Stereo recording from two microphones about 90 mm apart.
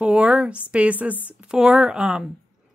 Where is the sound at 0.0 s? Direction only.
10° right (ahead or behind).